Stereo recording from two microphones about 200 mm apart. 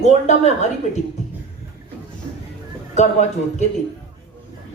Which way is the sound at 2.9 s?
35° left (ahead or behind).